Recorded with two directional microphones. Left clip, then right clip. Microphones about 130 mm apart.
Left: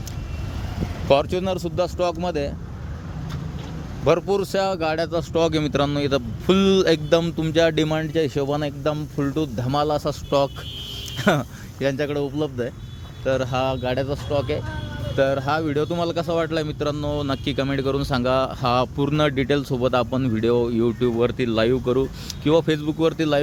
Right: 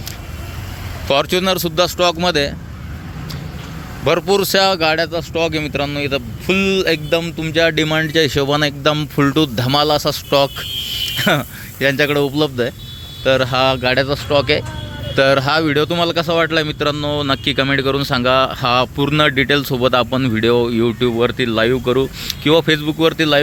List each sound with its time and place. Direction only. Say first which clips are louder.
1.0 s speech: right 4 dB; 5° left (ahead or behind)
4.0 s speech: right 5 dB; centre (ahead or behind)
5.3 s a man's voice: right 2 dB; 35° left (ahead or behind)
7.5 s speech: right 5 dB; 20° left (ahead or behind); by 9.0 s 5° right (ahead or behind)
9.1 s speech: right 9 dB; 15° right (ahead or behind); by 11.9 s 5° left (ahead or behind)
11.9 s speech: right 9 dB; 20° right (ahead or behind); by 23.4 s 5° left (ahead or behind)